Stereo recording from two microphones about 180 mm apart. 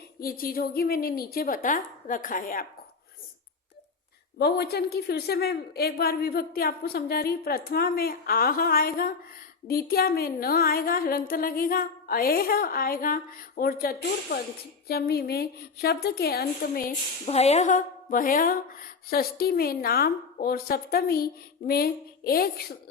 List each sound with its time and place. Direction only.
0.2 s a woman's voice: 55° left (ahead or behind)
4.4 s a woman's voice: 65° left (ahead or behind)
17.2 s a woman's voice: 35° left (ahead or behind); by 22.6 s 55° left (ahead or behind)